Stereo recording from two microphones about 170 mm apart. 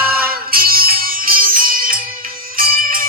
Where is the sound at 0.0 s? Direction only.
60° right (ahead or behind).